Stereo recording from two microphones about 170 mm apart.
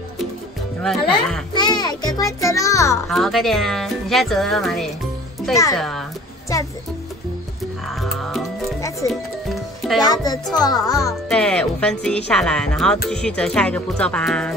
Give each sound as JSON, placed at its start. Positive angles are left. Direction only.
{"t": 0.8, "sound": "speech", "side_deg": 5}
{"t": 1.5, "sound": "a child's voice", "side_deg": 25}
{"t": 3.1, "sound": "speech", "side_deg": 0}
{"t": 7.9, "sound": "music", "side_deg": 0}
{"t": 10.0, "sound": "a child's voice", "side_deg": 25}
{"t": 11.1, "sound": "speech", "side_deg": 5}